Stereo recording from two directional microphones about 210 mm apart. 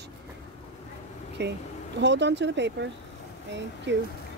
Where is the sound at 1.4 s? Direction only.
55° right (ahead or behind).